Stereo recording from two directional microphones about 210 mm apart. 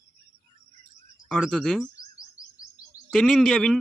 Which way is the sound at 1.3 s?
Centre (ahead or behind).